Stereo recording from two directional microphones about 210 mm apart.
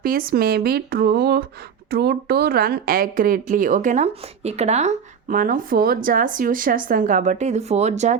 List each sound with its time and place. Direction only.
0.0 s speech: 45° right (ahead or behind)